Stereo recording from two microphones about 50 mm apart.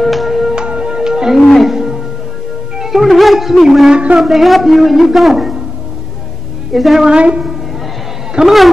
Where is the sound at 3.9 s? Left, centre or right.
Right.